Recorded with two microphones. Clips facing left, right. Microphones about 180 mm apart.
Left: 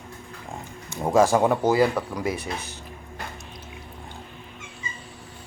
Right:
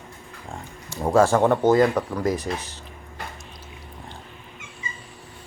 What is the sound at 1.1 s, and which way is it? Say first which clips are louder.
Speech: right 1 dB; 15° left (ahead or behind).